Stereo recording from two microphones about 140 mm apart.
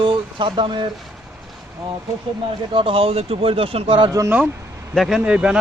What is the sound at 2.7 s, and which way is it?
Speech, 40° right (ahead or behind).